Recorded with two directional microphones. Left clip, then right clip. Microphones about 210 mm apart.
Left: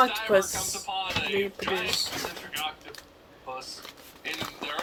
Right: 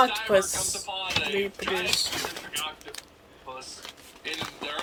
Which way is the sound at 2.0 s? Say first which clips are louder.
Right 2 dB; 30° right (ahead or behind).